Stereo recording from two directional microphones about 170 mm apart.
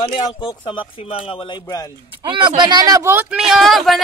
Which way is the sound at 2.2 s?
30° right (ahead or behind).